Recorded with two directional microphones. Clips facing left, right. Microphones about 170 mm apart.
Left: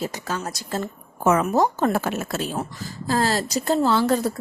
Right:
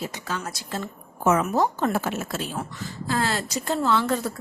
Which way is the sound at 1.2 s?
55° left (ahead or behind).